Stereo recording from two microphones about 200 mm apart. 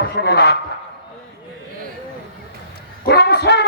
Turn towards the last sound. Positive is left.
turn(degrees=55)  # may be behind; listen again after turning